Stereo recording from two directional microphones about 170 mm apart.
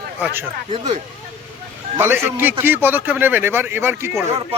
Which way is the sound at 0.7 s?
30° right (ahead or behind).